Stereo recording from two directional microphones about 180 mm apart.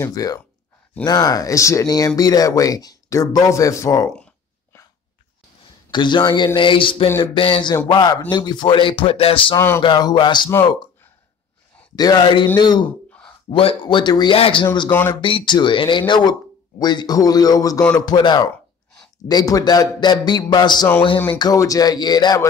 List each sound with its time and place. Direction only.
0.0 s speech: 20° left (ahead or behind)
5.9 s speech: 25° left (ahead or behind)
9.6 s speech: 15° left (ahead or behind)
9.8 s speech: 25° left (ahead or behind)
11.9 s speech: 20° left (ahead or behind)
14.9 s speech: 10° left (ahead or behind)
15.1 s speech: 25° left (ahead or behind)